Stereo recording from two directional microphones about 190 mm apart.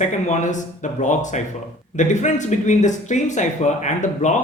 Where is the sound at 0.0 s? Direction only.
40° left (ahead or behind).